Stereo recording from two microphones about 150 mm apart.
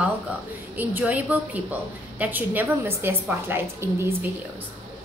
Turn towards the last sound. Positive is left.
turn(degrees=-15)  # may be behind; listen again after turning